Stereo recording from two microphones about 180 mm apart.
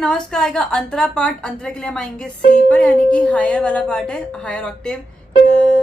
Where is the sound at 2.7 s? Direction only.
5° left (ahead or behind).